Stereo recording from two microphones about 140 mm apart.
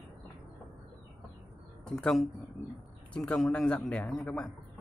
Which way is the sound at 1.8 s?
5° left (ahead or behind).